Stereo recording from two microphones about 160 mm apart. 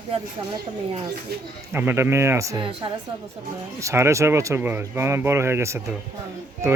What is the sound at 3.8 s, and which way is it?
Speech, 20° right (ahead or behind).